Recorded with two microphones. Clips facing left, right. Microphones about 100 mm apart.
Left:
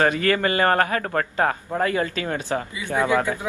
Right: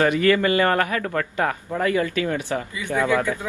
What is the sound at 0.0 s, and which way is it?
A man's voice, 45° left (ahead or behind).